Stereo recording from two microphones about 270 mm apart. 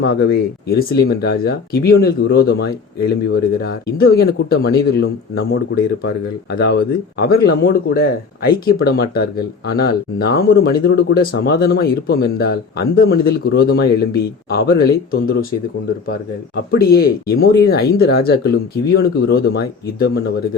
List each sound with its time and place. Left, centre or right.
0.0 s a man's voice: left
16.7 s a man's voice: left